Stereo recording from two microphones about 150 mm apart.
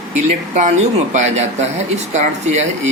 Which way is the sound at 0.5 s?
50° right (ahead or behind).